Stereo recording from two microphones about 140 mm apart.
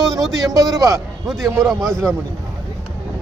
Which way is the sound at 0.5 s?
25° right (ahead or behind).